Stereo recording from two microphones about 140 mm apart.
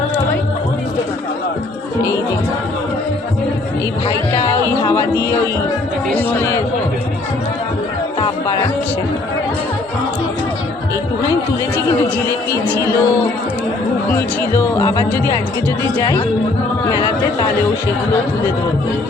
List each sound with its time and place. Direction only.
12.6 s speech: 15° left (ahead or behind)
14.2 s speech: 15° left (ahead or behind)